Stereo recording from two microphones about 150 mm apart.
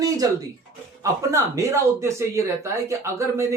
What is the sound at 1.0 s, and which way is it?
Speech, 20° right (ahead or behind).